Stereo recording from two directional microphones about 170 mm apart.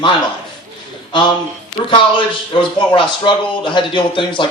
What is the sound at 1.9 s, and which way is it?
A man's voice, 30° left (ahead or behind).